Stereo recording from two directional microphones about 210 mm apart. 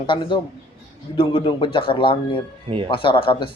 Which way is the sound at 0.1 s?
25° left (ahead or behind).